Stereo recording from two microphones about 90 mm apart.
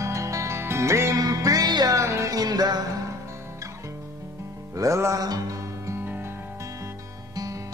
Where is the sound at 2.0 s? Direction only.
35° right (ahead or behind).